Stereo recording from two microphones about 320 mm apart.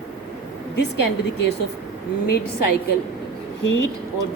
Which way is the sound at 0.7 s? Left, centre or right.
Left.